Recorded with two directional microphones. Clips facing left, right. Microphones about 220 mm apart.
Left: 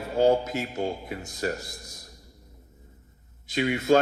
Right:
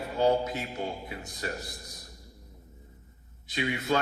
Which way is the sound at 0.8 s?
45° left (ahead or behind).